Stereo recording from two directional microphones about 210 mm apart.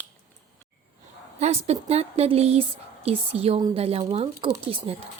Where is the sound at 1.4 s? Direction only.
30° right (ahead or behind).